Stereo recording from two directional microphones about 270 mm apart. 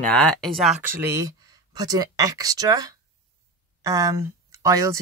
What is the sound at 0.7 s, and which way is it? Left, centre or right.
Speech, right.